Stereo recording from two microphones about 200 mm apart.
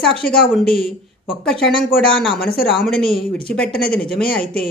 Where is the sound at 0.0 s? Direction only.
Centre (ahead or behind).